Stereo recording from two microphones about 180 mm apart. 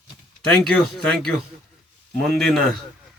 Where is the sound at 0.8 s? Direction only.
5° left (ahead or behind).